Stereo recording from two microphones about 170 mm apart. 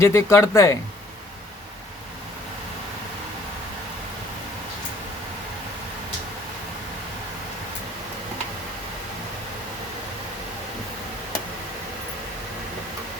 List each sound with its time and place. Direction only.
0.0 s speech: 15° left (ahead or behind)